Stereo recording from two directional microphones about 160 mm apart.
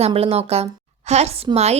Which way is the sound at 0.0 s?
40° right (ahead or behind).